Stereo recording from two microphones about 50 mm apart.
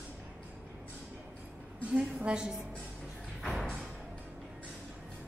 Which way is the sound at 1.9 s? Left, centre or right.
Centre.